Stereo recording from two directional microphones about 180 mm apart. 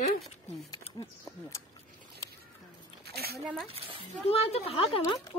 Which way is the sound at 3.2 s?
60° right (ahead or behind).